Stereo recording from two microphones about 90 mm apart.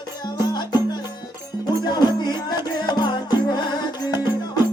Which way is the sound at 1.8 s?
50° left (ahead or behind).